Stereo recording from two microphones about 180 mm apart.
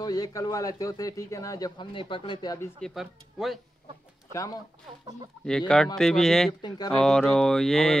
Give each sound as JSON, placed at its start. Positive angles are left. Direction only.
{"t": 0.0, "sound": "speech", "side_deg": 20}
{"t": 2.8, "sound": "mantra", "side_deg": 0}
{"t": 4.3, "sound": "speech", "side_deg": 20}
{"t": 5.4, "sound": "mantra", "side_deg": 5}